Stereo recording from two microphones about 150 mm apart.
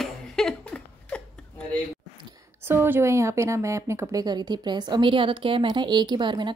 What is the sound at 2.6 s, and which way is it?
A woman's voice, 15° right (ahead or behind).